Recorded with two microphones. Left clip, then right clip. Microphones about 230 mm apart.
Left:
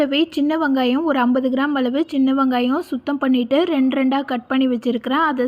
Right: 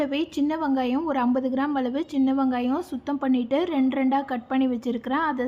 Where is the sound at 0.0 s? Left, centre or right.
Centre.